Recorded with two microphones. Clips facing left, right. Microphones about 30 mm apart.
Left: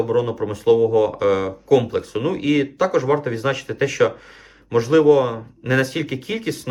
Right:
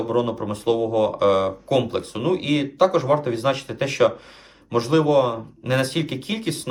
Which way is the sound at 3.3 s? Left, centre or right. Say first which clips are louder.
Even; right.